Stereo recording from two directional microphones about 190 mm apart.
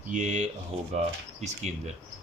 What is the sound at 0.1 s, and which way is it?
Speech, 40° right (ahead or behind).